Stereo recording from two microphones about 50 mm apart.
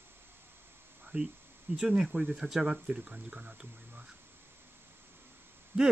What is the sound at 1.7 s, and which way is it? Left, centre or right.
Speech, centre.